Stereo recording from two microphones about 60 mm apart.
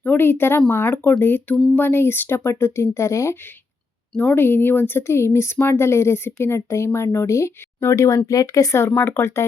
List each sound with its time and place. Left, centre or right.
0.0 s speech: left
4.4 s speech: left
9.0 s speech: left